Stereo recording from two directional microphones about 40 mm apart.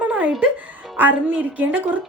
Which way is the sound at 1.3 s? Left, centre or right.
Right.